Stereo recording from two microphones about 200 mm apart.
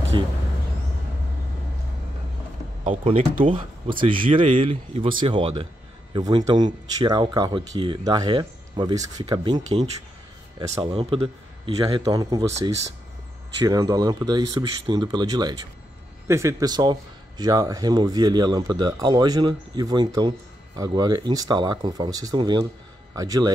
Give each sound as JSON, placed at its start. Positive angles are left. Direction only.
{"t": 0.1, "sound": "speech", "side_deg": -25}
{"t": 2.8, "sound": "speech", "side_deg": -35}
{"t": 10.7, "sound": "speech", "side_deg": -25}
{"t": 13.7, "sound": "a man's voice", "side_deg": -20}